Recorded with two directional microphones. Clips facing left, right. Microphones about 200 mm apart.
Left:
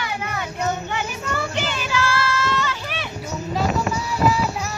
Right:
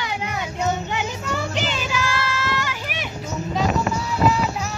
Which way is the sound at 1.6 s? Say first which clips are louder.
Left 1 dB; 15° right (ahead or behind).